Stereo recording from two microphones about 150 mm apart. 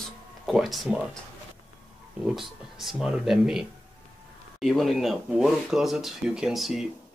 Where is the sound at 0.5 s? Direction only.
Centre (ahead or behind).